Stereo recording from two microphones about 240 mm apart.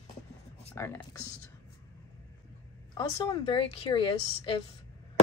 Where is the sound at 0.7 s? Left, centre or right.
Centre.